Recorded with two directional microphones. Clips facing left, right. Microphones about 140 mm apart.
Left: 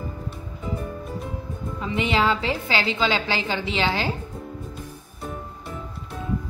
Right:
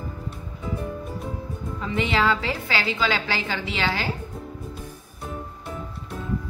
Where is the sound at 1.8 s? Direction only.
20° left (ahead or behind).